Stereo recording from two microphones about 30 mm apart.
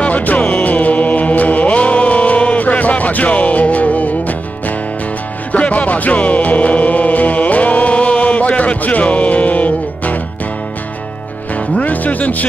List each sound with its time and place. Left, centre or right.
0.0 s music: left
11.8 s music: left